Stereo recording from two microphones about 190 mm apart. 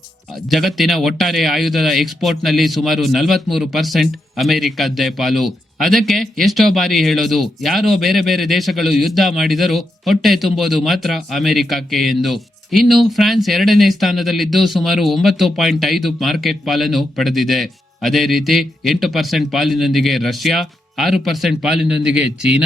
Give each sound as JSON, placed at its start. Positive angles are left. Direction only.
{"t": 0.5, "sound": "speech", "side_deg": 0}